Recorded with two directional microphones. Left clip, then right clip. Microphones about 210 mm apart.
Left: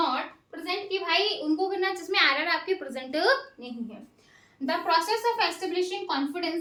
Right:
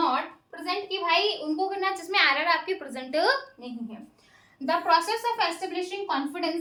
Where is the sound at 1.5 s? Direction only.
15° right (ahead or behind).